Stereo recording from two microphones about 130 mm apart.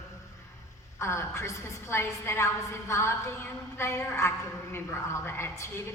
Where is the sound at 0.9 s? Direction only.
20° left (ahead or behind).